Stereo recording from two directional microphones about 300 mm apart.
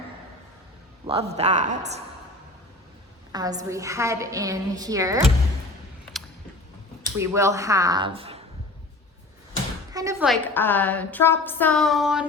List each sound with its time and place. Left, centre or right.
1.0 s speech: centre
3.3 s a woman's voice: centre
7.2 s a woman's voice: centre
9.9 s a woman's voice: centre
10.2 s a woman's voice: centre